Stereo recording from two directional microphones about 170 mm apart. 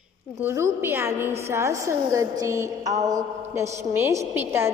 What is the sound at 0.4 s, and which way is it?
A woman's voice, 15° right (ahead or behind).